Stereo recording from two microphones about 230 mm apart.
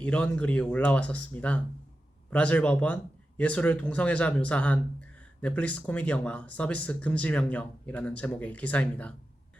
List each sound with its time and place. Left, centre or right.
0.0 s speech: centre